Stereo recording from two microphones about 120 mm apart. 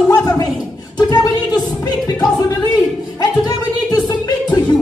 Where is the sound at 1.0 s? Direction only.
35° left (ahead or behind).